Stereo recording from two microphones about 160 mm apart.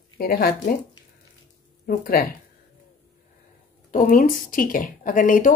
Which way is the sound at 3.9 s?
60° left (ahead or behind).